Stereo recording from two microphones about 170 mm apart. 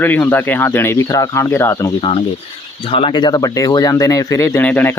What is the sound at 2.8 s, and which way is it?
Speech, 30° left (ahead or behind).